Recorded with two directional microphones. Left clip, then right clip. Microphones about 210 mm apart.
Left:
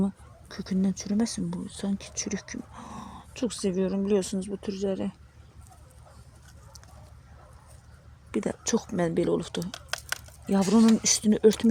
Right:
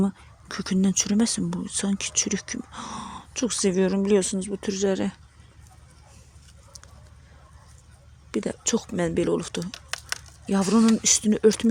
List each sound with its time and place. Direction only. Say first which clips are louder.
0.0 s speech: right 4 dB; 15° right (ahead or behind)
8.3 s speech: right 2 dB; 5° right (ahead or behind)